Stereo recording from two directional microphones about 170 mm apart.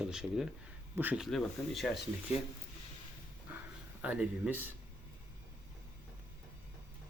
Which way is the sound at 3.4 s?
10° right (ahead or behind).